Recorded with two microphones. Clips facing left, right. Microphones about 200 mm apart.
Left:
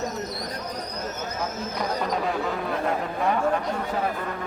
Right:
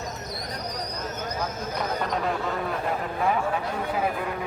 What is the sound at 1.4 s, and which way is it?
Speech, centre (ahead or behind).